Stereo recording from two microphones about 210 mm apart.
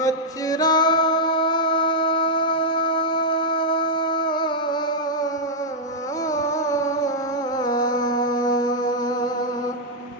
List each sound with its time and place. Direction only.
0.0 s music: 15° left (ahead or behind)
6.3 s carnatic music: 15° left (ahead or behind)
7.6 s music: 20° left (ahead or behind)